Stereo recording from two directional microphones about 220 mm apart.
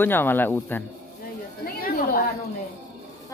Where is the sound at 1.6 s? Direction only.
40° left (ahead or behind).